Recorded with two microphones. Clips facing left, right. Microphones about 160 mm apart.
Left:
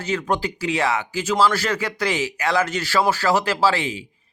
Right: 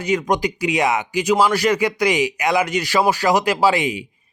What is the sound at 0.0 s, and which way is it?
Speech, 15° right (ahead or behind).